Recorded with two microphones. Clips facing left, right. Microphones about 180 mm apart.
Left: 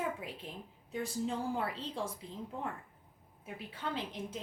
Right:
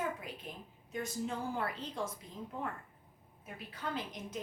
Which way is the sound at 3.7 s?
30° left (ahead or behind).